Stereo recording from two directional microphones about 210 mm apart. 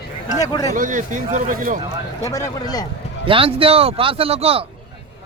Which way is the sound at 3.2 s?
25° right (ahead or behind).